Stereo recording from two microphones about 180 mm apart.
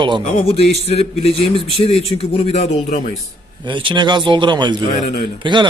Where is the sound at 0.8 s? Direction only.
35° left (ahead or behind).